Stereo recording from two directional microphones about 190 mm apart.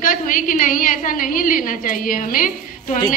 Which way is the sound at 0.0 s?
45° left (ahead or behind).